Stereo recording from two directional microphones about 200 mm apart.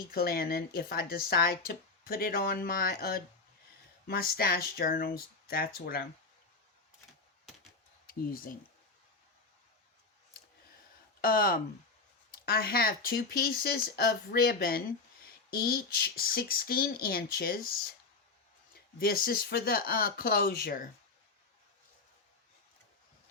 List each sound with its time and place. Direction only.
0.1 s speech: 50° left (ahead or behind)
8.0 s speech: 45° left (ahead or behind)
11.2 s speech: 45° left (ahead or behind)
18.9 s speech: 45° left (ahead or behind)